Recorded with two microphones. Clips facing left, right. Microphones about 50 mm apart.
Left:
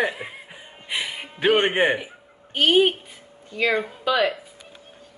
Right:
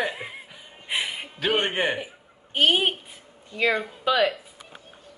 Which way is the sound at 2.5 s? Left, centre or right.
Centre.